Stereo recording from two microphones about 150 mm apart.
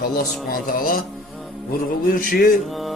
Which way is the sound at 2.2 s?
70° left (ahead or behind).